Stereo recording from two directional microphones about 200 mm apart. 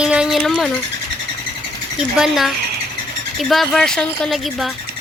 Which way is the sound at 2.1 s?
Centre (ahead or behind).